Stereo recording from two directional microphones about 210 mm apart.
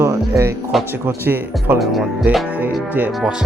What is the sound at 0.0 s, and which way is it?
Music, 15° right (ahead or behind).